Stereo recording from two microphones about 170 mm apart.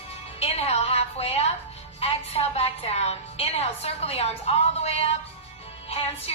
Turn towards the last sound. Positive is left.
turn(degrees=35)  # may be behind; listen again after turning